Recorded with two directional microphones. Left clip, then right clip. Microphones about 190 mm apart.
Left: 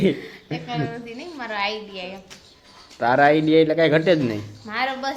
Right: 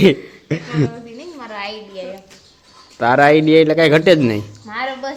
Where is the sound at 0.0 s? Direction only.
55° right (ahead or behind).